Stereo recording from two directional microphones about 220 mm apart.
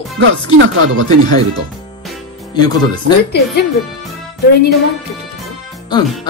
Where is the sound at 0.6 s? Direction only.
60° right (ahead or behind).